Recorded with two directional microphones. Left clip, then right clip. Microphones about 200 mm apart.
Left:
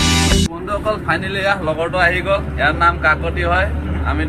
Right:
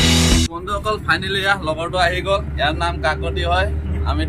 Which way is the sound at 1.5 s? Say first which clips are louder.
Left 3 dB; 25° right (ahead or behind).